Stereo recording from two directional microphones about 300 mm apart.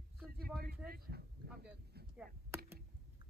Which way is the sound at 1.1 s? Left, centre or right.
Right.